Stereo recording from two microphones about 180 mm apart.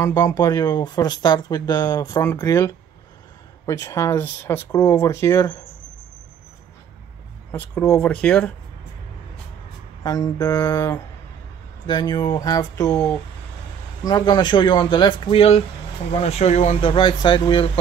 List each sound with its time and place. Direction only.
0.0 s speech: 15° left (ahead or behind)
7.5 s speech: 15° left (ahead or behind)
7.9 s speech: 5° left (ahead or behind)
10.0 s speech: 20° left (ahead or behind)